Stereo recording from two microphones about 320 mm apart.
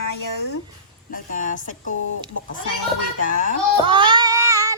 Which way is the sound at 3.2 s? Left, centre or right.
Left.